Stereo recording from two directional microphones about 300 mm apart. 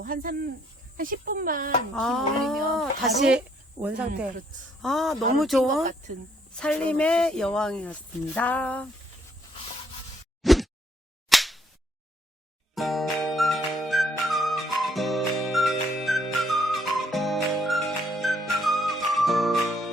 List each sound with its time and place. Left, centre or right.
0.0 s speech: right
2.0 s a woman's voice: centre
10.4 s a sound: centre
11.3 s whip: centre
12.7 s music: centre